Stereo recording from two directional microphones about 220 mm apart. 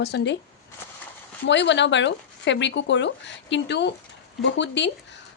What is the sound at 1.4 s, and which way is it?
A woman's voice, 55° left (ahead or behind).